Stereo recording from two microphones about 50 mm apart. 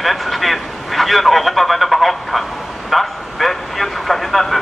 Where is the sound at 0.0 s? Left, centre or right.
Centre.